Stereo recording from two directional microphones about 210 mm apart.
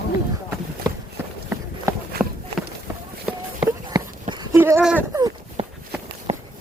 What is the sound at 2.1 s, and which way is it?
Run, 50° right (ahead or behind).